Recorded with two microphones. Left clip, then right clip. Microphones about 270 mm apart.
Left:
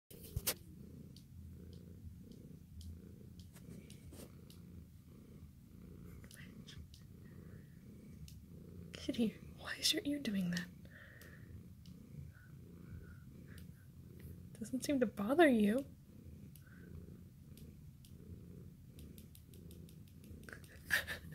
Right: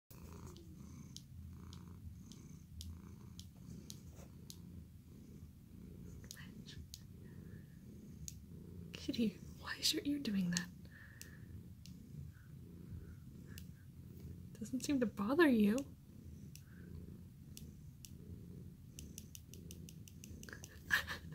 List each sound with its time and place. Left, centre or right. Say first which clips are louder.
8.9 s speech: left 1 dB; centre
14.6 s speech: left 2 dB; centre
20.4 s chewing: even; centre